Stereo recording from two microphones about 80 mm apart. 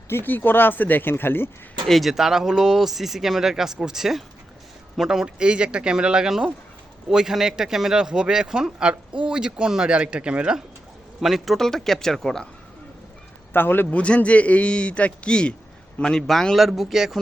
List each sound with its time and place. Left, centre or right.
0.1 s speech: left
1.9 s speech: centre
13.5 s speech: left
13.9 s a man's voice: centre